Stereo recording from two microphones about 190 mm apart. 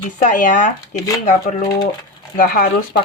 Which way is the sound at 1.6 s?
20° left (ahead or behind).